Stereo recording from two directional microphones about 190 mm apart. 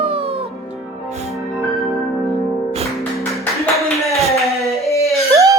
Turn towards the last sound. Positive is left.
turn(degrees=-15)  # may be behind; listen again after turning